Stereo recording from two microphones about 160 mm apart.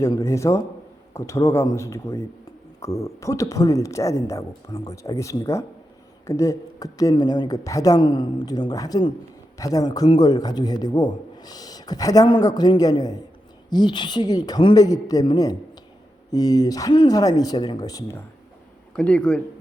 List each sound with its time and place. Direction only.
0.0 s a man's voice: 20° left (ahead or behind)
18.9 s a man's voice: 5° left (ahead or behind)